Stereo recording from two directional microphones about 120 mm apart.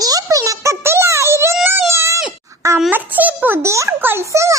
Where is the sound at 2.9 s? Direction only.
15° right (ahead or behind).